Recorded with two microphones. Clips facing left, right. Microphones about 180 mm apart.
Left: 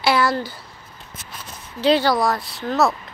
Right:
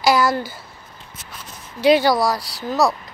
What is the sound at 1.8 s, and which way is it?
Speech, 15° right (ahead or behind).